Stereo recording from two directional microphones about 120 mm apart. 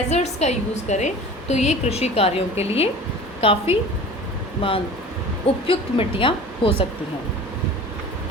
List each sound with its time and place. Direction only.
0.1 s a woman's voice: 65° left (ahead or behind); by 6.8 s 45° left (ahead or behind)